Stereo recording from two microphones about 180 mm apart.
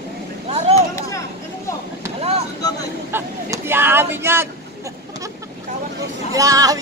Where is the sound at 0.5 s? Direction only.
35° right (ahead or behind).